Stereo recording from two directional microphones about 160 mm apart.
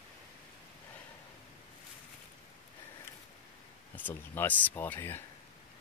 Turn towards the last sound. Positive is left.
turn(degrees=15)  # may be behind; listen again after turning